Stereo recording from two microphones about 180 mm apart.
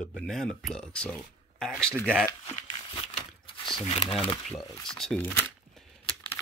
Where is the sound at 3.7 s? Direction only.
30° left (ahead or behind).